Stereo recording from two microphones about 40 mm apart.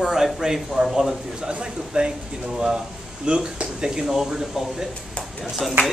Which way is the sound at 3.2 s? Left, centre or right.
Right.